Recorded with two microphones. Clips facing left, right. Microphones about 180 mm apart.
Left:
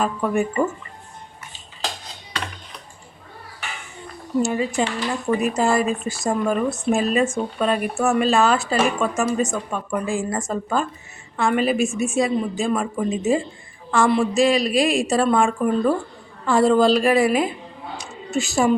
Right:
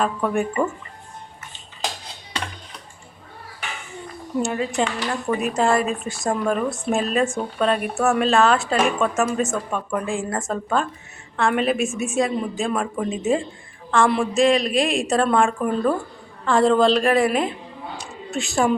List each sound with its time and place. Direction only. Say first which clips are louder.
0.0 s speech: left 1 dB; 5° left (ahead or behind)
4.4 s speech: left 2 dB; centre (ahead or behind)